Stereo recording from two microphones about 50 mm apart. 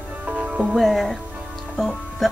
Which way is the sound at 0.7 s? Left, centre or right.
Centre.